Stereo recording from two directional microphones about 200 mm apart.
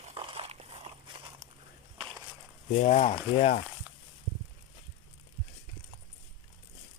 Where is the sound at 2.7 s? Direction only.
35° left (ahead or behind).